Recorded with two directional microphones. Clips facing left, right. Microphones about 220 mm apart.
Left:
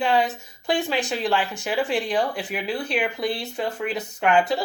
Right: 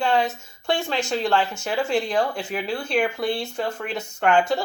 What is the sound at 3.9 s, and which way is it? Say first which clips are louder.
Speech: right 1 dB; 20° left (ahead or behind).